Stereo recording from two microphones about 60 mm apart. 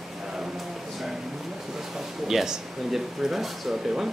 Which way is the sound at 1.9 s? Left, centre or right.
Centre.